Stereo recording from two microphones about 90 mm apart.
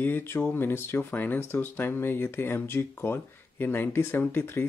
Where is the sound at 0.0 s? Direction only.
25° left (ahead or behind).